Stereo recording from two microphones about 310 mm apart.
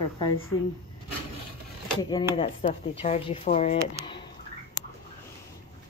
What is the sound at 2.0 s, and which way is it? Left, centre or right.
A woman's voice, centre.